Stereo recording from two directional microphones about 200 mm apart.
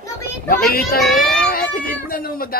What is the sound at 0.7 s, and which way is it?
Speech, 50° left (ahead or behind).